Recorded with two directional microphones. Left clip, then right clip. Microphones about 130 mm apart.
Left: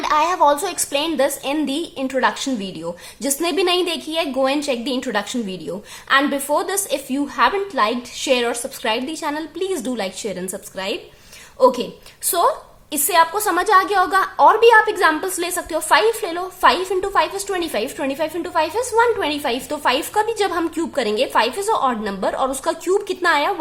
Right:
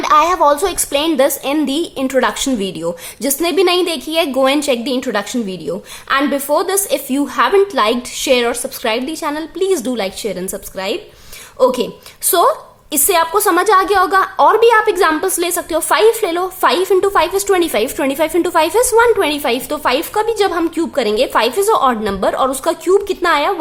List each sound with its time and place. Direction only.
0.0 s a woman's voice: 30° right (ahead or behind)
3.2 s a woman's voice: 20° right (ahead or behind)
7.1 s a woman's voice: 35° right (ahead or behind)
8.3 s a woman's voice: 20° right (ahead or behind)